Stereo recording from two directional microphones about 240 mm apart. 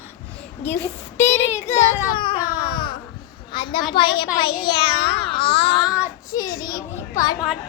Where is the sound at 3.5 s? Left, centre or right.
Centre.